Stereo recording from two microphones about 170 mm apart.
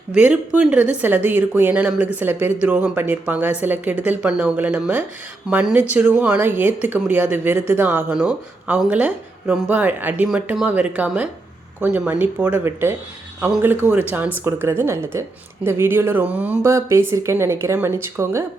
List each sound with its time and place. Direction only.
0.1 s speech: 10° right (ahead or behind)